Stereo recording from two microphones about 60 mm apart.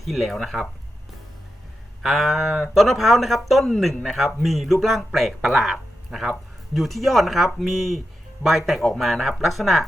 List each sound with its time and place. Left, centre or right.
0.0 s speech: centre
2.0 s speech: centre